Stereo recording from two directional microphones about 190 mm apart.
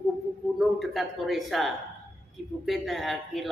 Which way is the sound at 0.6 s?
Centre (ahead or behind).